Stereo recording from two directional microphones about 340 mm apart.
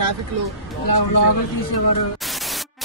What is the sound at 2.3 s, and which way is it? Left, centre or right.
Static, centre.